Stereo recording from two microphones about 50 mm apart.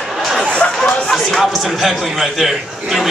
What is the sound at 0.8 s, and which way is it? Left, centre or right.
Music, left.